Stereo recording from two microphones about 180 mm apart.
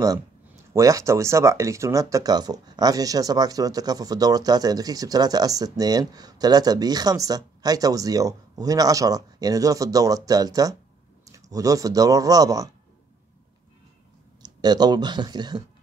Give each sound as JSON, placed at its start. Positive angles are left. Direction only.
{"t": 0.7, "sound": "speech", "side_deg": -15}
{"t": 14.4, "sound": "speech", "side_deg": -25}